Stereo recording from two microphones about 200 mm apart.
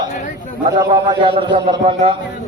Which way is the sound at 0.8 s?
20° right (ahead or behind).